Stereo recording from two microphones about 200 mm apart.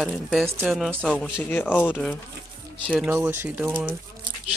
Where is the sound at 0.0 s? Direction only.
Centre (ahead or behind).